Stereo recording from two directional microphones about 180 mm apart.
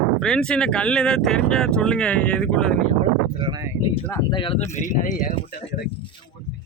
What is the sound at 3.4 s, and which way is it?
Speech, 25° right (ahead or behind).